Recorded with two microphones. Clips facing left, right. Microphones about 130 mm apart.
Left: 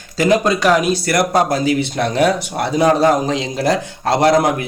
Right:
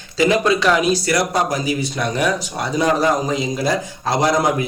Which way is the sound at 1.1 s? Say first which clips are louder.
Left 3 dB; 55° left (ahead or behind).